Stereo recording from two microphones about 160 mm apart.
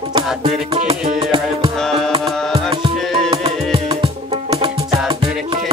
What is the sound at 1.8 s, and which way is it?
Music, centre (ahead or behind).